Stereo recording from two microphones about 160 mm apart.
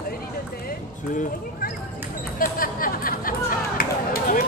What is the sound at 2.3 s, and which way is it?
Chatter, 65° left (ahead or behind).